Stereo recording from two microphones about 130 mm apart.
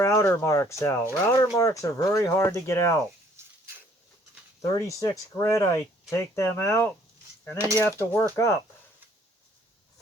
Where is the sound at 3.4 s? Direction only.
20° right (ahead or behind).